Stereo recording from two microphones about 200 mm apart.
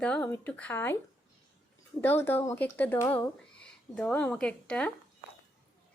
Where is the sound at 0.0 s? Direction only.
5° left (ahead or behind).